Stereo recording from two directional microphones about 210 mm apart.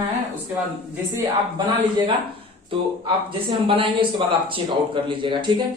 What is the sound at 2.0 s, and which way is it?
Speech, 25° right (ahead or behind).